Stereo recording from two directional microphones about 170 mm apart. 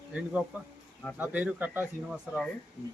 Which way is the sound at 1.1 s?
10° right (ahead or behind).